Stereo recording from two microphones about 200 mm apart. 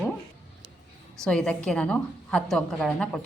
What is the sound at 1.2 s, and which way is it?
A woman's voice, 5° left (ahead or behind).